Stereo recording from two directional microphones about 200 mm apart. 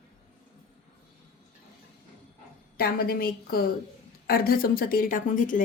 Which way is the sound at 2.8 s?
50° left (ahead or behind).